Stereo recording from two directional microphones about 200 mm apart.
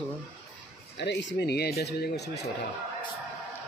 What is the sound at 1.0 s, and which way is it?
Speech, 60° left (ahead or behind).